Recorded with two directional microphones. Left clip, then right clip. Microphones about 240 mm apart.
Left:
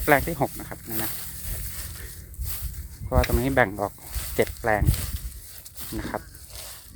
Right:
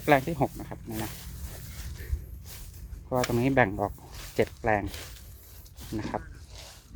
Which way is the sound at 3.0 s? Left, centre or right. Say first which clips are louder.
Left 2 dB; centre.